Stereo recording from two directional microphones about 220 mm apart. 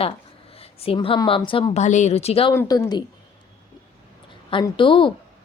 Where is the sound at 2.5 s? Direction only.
15° left (ahead or behind).